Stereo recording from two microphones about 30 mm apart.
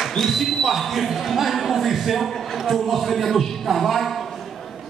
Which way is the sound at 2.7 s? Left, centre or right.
Centre.